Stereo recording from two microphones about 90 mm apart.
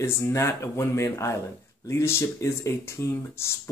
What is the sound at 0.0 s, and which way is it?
Speech, 30° left (ahead or behind).